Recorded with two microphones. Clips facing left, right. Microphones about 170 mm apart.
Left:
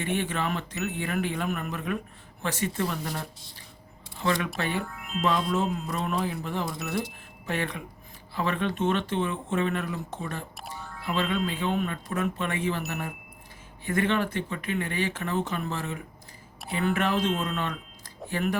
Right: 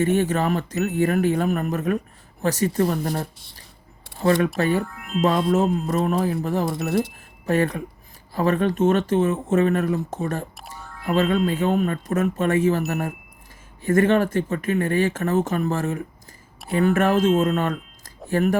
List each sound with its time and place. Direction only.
0.0 s speech: 40° right (ahead or behind)